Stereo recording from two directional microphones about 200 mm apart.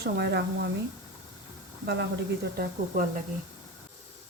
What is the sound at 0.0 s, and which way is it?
Speech, 55° right (ahead or behind).